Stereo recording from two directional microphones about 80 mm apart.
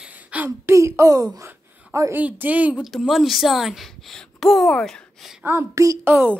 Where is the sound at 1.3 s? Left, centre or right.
Right.